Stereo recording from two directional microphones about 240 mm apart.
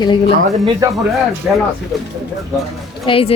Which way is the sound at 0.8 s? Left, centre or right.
Centre.